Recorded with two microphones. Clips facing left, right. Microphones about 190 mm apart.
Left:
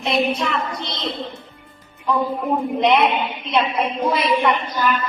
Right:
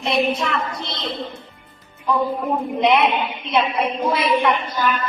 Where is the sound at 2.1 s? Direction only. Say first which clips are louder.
Left 1 dB; centre (ahead or behind).